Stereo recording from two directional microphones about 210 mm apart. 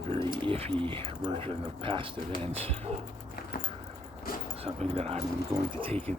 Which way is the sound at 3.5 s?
45° left (ahead or behind).